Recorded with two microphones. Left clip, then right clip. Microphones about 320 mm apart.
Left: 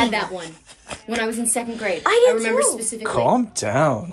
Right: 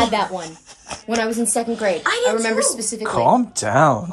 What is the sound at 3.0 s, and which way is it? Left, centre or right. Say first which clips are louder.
Speech: right 3 dB; centre.